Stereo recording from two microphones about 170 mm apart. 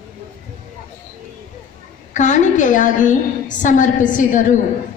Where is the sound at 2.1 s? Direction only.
45° left (ahead or behind).